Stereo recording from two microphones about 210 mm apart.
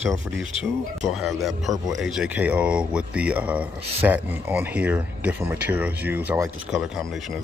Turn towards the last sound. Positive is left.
turn(degrees=-5)  # may be behind; listen again after turning